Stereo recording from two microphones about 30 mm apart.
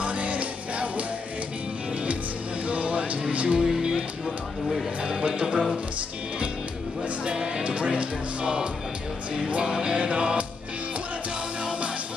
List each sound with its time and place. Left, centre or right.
0.0 s music: right
2.7 s music: right
3.5 s music: centre
5.0 s speech: right
7.8 s speech: right
9.7 s speech: right
9.9 s music: right